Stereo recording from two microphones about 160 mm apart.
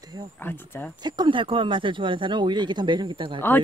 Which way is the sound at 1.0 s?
30° right (ahead or behind).